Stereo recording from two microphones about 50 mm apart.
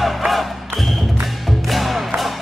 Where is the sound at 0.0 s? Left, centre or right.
Centre.